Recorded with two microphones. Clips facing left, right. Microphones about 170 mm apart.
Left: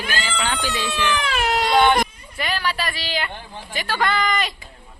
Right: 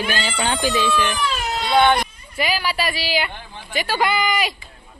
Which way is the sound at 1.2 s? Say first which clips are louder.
Left 1 dB; 75° left (ahead or behind).